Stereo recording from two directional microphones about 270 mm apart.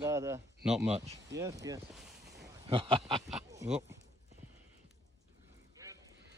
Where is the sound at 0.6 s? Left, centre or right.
Centre.